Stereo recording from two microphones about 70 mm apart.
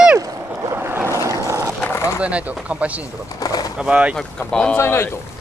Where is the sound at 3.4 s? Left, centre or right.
Left.